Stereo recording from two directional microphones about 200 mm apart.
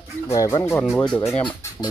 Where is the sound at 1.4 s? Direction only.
25° left (ahead or behind).